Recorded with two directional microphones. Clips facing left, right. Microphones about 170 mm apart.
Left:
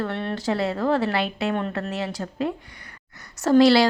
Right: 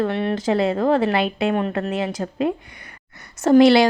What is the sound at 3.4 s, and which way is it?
Speech, 20° right (ahead or behind).